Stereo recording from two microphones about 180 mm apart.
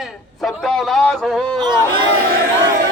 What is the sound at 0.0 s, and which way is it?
A man's voice, centre (ahead or behind).